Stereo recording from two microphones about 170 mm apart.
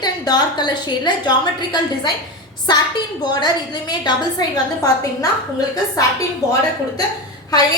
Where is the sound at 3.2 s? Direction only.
25° left (ahead or behind).